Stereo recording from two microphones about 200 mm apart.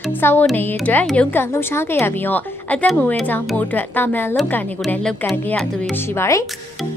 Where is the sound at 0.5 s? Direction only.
5° left (ahead or behind).